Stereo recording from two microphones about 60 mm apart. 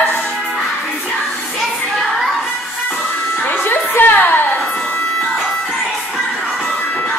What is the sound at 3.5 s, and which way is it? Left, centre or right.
Music, left.